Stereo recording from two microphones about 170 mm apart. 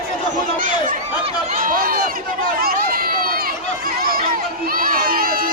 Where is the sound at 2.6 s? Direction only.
60° right (ahead or behind).